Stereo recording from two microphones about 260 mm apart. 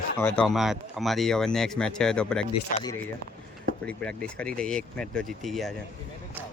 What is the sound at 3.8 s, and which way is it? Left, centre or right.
Speech, centre.